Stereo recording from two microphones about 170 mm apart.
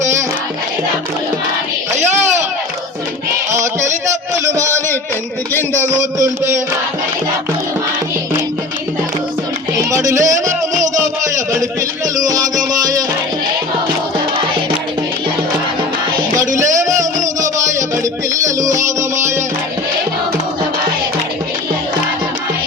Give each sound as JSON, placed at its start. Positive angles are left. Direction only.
{"t": 3.5, "sound": "music", "side_deg": -15}
{"t": 5.5, "sound": "a man's voice", "side_deg": 15}
{"t": 6.0, "sound": "a sound", "side_deg": -15}
{"t": 9.9, "sound": "music", "side_deg": -15}
{"t": 10.9, "sound": "music", "side_deg": -45}
{"t": 12.1, "sound": "music", "side_deg": -20}
{"t": 16.9, "sound": "music", "side_deg": -45}
{"t": 18.8, "sound": "music", "side_deg": -20}